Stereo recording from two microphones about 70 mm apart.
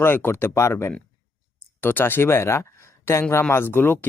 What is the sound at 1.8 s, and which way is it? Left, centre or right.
Speech, left.